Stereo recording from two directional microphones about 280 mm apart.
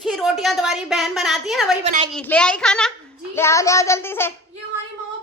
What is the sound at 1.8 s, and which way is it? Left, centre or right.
Speech, right.